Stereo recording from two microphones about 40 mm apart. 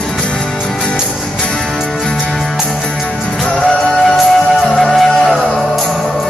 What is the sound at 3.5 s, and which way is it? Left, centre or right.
Music, centre.